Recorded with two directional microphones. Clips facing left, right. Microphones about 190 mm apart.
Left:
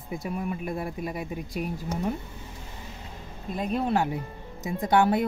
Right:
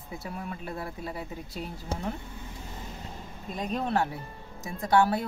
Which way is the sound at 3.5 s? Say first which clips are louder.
Left 3 dB; 5° left (ahead or behind).